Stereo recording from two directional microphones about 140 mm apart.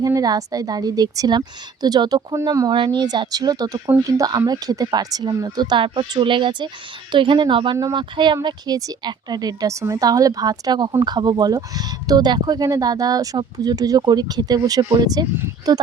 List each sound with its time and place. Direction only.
0.0 s a woman's voice: 25° right (ahead or behind)